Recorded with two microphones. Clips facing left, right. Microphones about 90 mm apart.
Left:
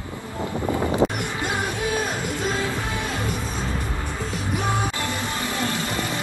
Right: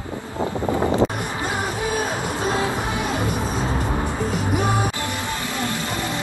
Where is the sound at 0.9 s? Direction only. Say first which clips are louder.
Right 1 dB; 25° right (ahead or behind).